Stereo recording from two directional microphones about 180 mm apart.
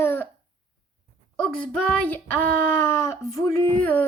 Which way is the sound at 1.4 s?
5° left (ahead or behind).